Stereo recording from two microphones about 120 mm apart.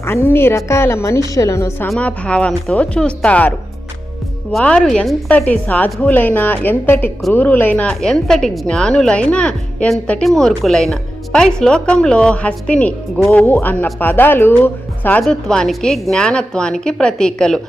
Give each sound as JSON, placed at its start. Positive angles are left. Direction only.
{"t": 0.0, "sound": "a woman's voice", "side_deg": 20}
{"t": 2.0, "sound": "a woman's voice", "side_deg": 10}
{"t": 4.5, "sound": "a woman's voice", "side_deg": 5}